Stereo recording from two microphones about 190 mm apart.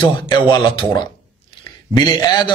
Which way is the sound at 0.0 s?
25° left (ahead or behind).